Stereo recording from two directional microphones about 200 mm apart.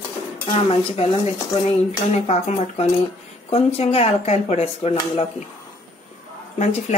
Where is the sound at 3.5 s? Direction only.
30° left (ahead or behind).